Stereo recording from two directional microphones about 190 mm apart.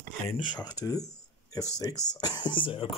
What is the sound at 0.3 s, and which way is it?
Speech, 20° left (ahead or behind).